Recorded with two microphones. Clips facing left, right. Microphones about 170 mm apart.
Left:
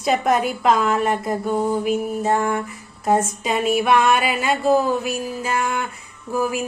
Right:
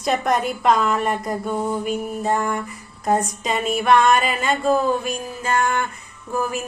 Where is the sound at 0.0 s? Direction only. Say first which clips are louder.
Left 2 dB; 5° left (ahead or behind).